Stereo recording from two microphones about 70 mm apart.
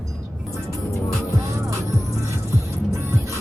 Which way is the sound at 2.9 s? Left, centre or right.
Right.